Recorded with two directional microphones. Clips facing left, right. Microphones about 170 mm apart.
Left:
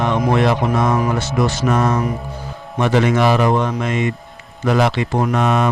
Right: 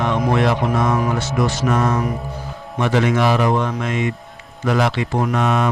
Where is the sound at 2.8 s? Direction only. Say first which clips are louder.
Left 2 dB; 25° left (ahead or behind).